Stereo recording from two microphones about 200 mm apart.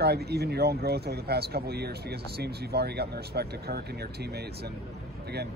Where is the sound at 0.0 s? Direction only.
55° right (ahead or behind).